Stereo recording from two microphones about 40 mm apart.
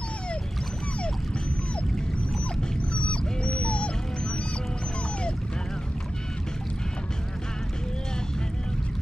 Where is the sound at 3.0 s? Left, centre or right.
Left.